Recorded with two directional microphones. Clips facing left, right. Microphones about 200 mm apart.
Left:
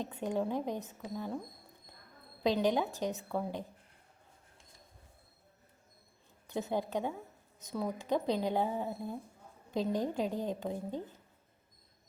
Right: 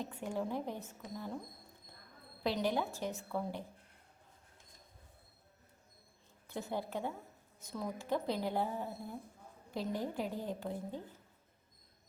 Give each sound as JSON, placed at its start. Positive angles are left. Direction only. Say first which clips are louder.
{"t": 0.0, "sound": "speech", "louder": "left 4 dB", "side_deg": 20}
{"t": 2.4, "sound": "speech", "louder": "left 5 dB", "side_deg": 20}
{"t": 6.5, "sound": "a woman's voice", "louder": "left 5 dB", "side_deg": 20}